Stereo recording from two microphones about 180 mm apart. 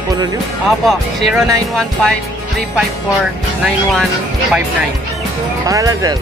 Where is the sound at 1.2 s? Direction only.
Centre (ahead or behind).